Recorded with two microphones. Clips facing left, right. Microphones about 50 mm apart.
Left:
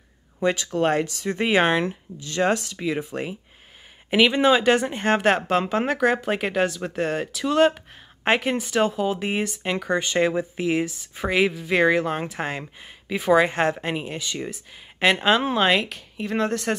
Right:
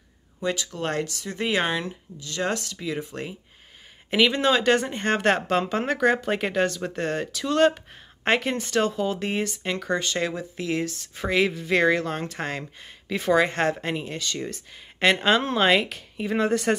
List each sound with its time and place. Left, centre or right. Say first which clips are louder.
0.4 s speech: left 6 dB; left
4.1 s speech: left 3 dB; centre